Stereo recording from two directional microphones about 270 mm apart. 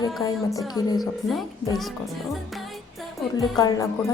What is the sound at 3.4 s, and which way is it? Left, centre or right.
Speech, centre.